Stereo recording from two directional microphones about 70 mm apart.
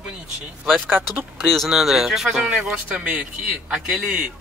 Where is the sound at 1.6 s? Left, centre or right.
Centre.